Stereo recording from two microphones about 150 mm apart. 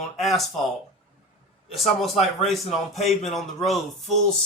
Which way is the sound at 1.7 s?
Centre (ahead or behind).